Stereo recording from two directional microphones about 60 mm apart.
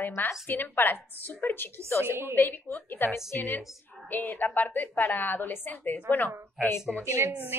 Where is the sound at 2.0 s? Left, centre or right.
Right.